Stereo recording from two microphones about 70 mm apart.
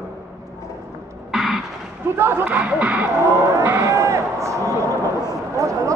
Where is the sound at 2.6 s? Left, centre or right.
Centre.